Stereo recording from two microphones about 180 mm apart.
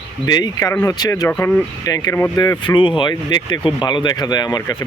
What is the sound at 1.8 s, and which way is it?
Speech, 20° left (ahead or behind).